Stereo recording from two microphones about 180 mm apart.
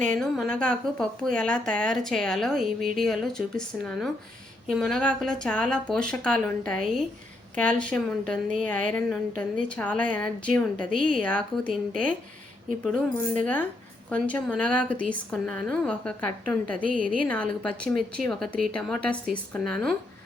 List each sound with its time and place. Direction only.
0.1 s speech: 5° left (ahead or behind)
7.8 s a woman's voice: 5° left (ahead or behind)
10.9 s a woman's voice: 45° right (ahead or behind)
11.2 s a woman's voice: 5° left (ahead or behind)
16.8 s a woman's voice: 50° right (ahead or behind)
17.2 s speech: 5° left (ahead or behind)